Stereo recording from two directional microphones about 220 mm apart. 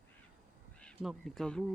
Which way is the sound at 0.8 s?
Centre (ahead or behind).